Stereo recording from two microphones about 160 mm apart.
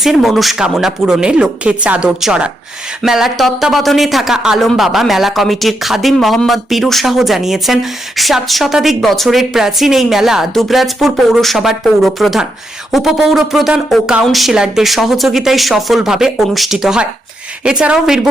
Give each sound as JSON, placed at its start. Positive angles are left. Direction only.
{"t": 0.0, "sound": "speech", "side_deg": 0}